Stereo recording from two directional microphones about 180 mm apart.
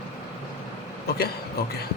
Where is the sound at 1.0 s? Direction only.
60° left (ahead or behind).